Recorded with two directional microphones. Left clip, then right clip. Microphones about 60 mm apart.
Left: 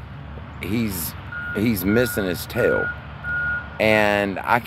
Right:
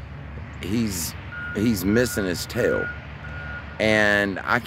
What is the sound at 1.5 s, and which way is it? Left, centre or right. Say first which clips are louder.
Speech: left 1 dB; right.